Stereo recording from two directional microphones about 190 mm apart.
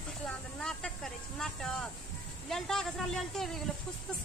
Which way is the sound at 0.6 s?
5° left (ahead or behind).